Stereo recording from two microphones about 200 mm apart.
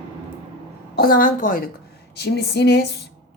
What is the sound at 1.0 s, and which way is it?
Speech, 45° left (ahead or behind).